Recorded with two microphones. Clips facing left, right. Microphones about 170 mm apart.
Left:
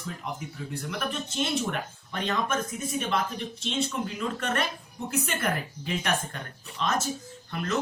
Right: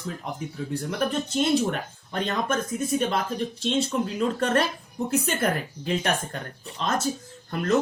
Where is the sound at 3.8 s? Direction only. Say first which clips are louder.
Right 5 dB; 35° right (ahead or behind).